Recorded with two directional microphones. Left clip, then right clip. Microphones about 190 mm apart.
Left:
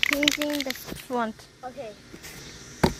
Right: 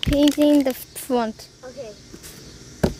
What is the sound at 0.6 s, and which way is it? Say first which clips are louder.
Speech: right 8 dB; 30° right (ahead or behind).